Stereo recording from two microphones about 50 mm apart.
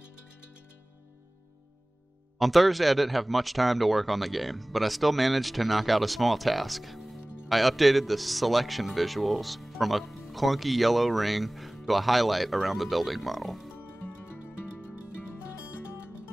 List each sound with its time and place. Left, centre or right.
2.3 s speech: centre
13.7 s music: left